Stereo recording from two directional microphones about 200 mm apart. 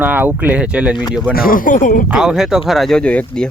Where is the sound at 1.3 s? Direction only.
45° left (ahead or behind).